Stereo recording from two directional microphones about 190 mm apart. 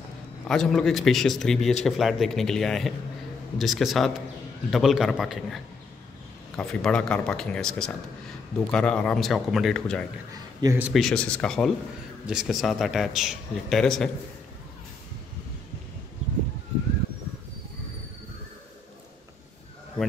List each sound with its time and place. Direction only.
0.5 s a man's voice: centre (ahead or behind)
10.3 s a man's voice: 20° right (ahead or behind)
10.8 s a man's voice: centre (ahead or behind)